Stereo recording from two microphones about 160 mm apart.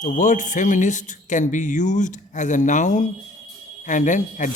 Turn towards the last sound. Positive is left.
turn(degrees=50)  # may be behind; listen again after turning